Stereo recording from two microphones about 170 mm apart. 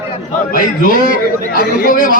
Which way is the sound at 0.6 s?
55° left (ahead or behind).